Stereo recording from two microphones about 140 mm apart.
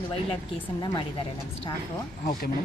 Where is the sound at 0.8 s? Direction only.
35° left (ahead or behind).